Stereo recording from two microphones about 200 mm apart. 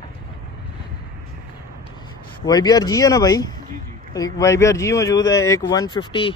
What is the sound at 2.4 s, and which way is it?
Speech, 20° left (ahead or behind).